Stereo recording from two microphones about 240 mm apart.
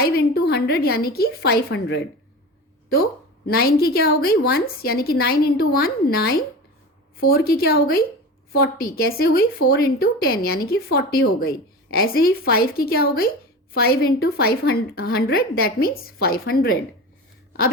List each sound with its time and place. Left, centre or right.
0.0 s a woman's voice: left
3.4 s a woman's voice: left